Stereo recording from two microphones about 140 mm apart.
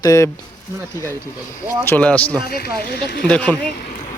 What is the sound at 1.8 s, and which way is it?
Speech, 10° left (ahead or behind).